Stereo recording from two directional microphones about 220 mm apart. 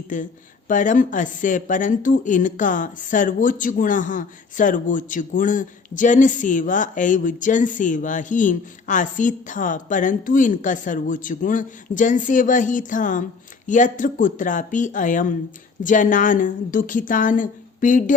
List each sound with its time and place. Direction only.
0.1 s speech: 35° left (ahead or behind)